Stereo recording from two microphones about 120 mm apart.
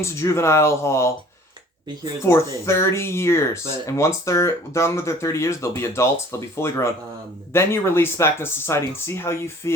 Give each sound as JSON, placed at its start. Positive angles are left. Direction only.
{"t": 0.0, "sound": "speech", "side_deg": 25}
{"t": 2.2, "sound": "speech", "side_deg": 20}